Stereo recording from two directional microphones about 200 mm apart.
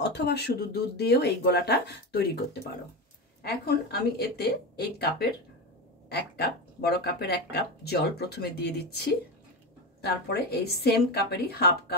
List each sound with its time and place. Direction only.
0.0 s speech: 55° left (ahead or behind)
3.4 s speech: 50° left (ahead or behind)